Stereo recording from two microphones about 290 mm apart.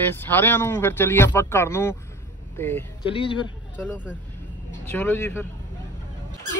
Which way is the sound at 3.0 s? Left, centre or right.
Centre.